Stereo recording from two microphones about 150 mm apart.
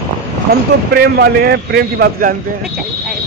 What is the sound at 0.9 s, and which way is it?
A man's voice, 90° right.